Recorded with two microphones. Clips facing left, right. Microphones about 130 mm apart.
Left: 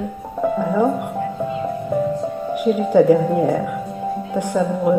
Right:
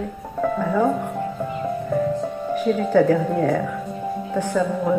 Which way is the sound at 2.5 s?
15° left (ahead or behind).